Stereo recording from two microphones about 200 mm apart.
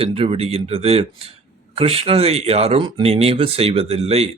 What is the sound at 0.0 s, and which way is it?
A man's voice, 30° right (ahead or behind).